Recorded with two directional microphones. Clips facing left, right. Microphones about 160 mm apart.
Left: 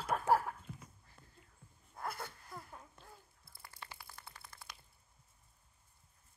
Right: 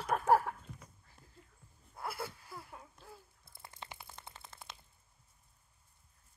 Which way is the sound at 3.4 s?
25° right (ahead or behind).